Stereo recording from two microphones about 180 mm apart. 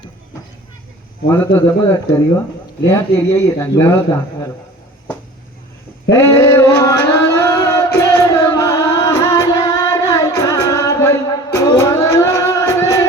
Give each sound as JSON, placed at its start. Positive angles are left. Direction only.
{"t": 1.3, "sound": "speech", "side_deg": 10}
{"t": 2.8, "sound": "speech", "side_deg": 15}
{"t": 6.1, "sound": "a sound", "side_deg": 15}